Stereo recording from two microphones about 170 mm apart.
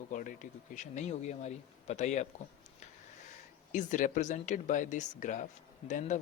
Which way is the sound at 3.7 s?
50° left (ahead or behind).